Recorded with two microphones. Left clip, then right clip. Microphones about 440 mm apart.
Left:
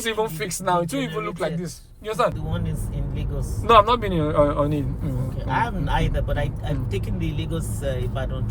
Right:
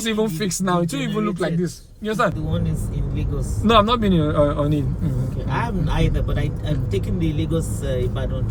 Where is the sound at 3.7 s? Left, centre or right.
Centre.